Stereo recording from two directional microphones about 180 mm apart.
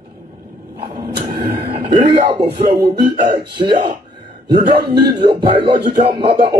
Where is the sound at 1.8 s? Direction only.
25° right (ahead or behind).